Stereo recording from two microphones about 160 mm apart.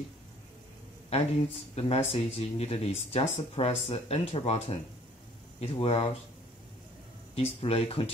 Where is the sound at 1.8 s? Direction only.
40° left (ahead or behind).